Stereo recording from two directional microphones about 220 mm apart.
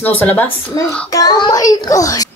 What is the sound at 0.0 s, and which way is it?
A child's voice, 10° left (ahead or behind).